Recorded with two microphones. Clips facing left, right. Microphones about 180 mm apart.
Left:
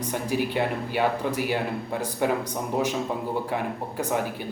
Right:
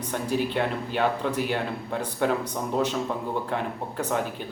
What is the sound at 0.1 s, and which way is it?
Speech, 10° left (ahead or behind).